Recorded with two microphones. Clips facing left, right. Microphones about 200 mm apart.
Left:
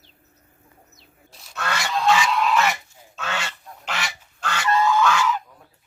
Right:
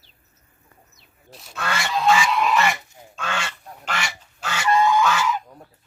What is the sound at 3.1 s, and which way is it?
Duck, 5° left (ahead or behind).